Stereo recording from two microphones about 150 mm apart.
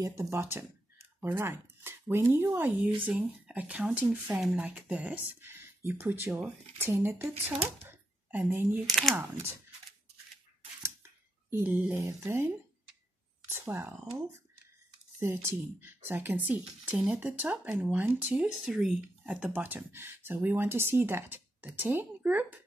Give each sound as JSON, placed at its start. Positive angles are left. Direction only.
{"t": 0.0, "sound": "speech", "side_deg": -20}
{"t": 11.5, "sound": "speech", "side_deg": -15}